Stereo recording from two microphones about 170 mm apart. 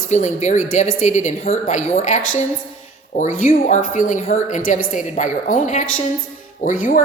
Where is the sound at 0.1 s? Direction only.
45° left (ahead or behind).